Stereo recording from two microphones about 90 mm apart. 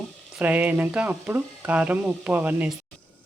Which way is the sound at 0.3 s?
15° right (ahead or behind).